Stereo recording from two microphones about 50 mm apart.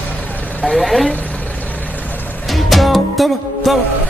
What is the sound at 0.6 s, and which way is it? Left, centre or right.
Vehicle, centre.